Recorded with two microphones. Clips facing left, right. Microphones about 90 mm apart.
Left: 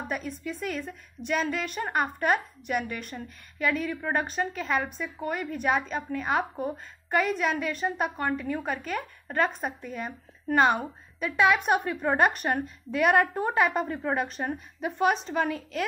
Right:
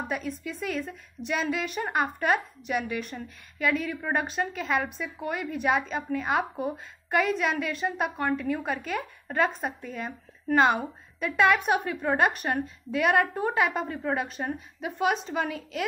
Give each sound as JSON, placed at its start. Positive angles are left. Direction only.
{"t": 0.1, "sound": "a woman's voice", "side_deg": 0}